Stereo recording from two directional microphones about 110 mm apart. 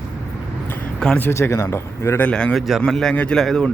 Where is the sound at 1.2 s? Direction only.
25° left (ahead or behind).